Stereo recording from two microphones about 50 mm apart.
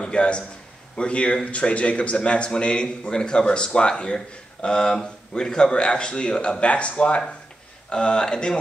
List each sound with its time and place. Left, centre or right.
0.0 s a man's voice: left